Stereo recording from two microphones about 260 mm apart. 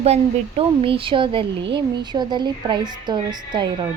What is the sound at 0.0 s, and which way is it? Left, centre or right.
A woman's voice, right.